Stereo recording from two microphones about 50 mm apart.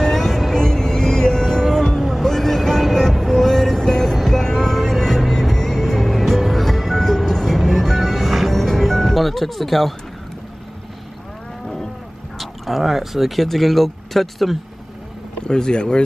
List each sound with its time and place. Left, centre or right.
0.0 s music: centre
2.0 s music: centre
2.2 s vehicle: centre
11.6 s cattle: centre
12.4 s speech: centre
15.4 s speech: centre